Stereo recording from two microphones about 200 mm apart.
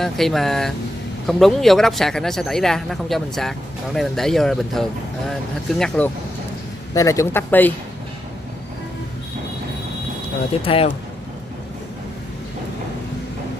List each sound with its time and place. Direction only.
0.0 s speech: centre (ahead or behind)
6.9 s speech: 15° left (ahead or behind)
10.6 s speech: 30° left (ahead or behind)